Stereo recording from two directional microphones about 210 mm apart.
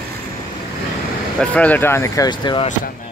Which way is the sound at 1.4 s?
5° left (ahead or behind).